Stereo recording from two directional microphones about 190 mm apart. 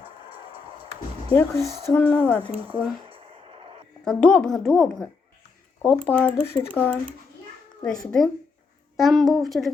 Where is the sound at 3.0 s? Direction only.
30° right (ahead or behind).